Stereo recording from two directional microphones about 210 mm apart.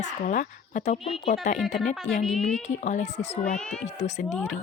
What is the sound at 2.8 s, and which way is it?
A woman's voice, 35° left (ahead or behind).